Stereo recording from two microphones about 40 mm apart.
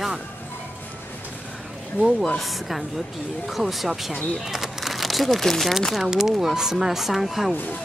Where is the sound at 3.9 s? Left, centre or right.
Centre.